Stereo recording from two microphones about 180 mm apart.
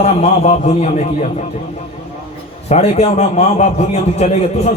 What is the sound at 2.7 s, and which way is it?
A man's voice, 35° left (ahead or behind).